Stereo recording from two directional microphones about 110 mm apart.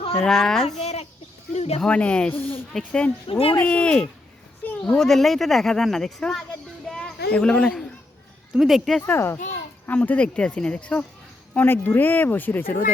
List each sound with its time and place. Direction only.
0.0 s a sound: 60° left (ahead or behind)
0.3 s speech: 5° left (ahead or behind)
1.5 s speech: 70° left (ahead or behind)
1.8 s speech: 10° left (ahead or behind)
3.2 s speech: 60° left (ahead or behind)
3.5 s speech: 15° left (ahead or behind)
6.8 s a sound: 10° left (ahead or behind)
8.5 s speech: centre (ahead or behind)
9.0 s speech: 20° left (ahead or behind)